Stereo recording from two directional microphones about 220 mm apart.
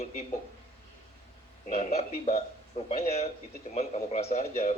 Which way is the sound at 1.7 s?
30° left (ahead or behind).